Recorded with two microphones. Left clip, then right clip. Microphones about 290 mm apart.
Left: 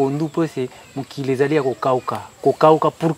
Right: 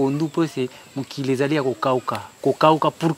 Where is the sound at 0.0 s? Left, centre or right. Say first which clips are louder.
Left 2 dB; left.